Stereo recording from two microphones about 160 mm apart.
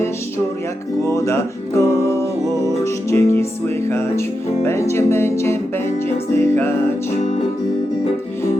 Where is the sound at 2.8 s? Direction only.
20° left (ahead or behind).